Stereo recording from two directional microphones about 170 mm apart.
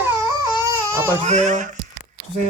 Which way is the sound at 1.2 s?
45° right (ahead or behind).